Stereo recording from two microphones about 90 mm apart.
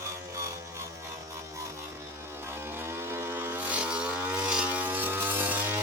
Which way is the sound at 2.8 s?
30° right (ahead or behind).